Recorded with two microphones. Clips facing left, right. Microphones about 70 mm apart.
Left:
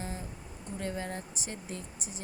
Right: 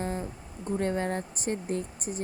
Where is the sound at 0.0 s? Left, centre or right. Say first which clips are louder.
Right 8 dB; right.